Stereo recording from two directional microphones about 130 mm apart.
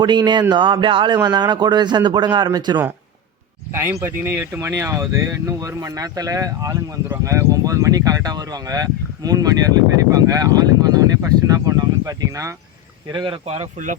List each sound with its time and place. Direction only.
0.0 s a man's voice: 35° right (ahead or behind)
3.8 s speech: 15° right (ahead or behind)
13.1 s a man's voice: 35° right (ahead or behind)